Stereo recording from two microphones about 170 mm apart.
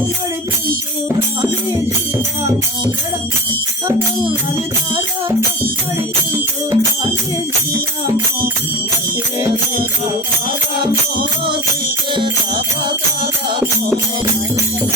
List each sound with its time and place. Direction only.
6.3 s music: 15° right (ahead or behind)